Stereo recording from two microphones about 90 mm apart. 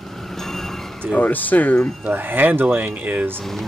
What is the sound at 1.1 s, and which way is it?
Speech, 20° left (ahead or behind).